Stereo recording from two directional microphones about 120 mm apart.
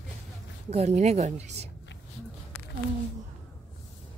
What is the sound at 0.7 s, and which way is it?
Speech, 65° right (ahead or behind).